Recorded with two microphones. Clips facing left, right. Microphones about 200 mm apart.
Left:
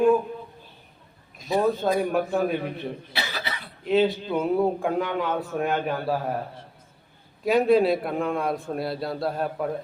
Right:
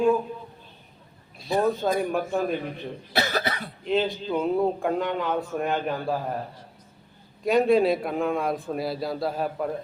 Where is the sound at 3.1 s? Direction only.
45° right (ahead or behind).